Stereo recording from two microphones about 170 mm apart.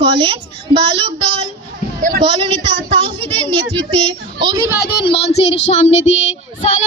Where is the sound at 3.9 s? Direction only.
30° right (ahead or behind).